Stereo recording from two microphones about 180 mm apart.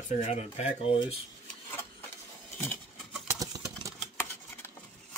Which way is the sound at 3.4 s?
20° right (ahead or behind).